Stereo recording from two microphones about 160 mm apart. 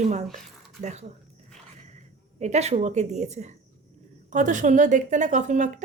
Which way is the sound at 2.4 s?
45° right (ahead or behind).